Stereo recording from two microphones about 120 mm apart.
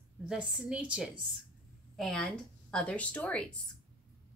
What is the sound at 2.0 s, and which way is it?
Speech, 5° left (ahead or behind).